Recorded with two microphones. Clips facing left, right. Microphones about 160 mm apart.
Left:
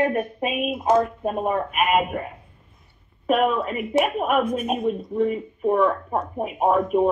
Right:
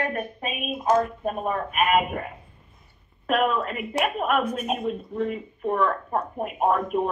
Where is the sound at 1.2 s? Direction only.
25° left (ahead or behind).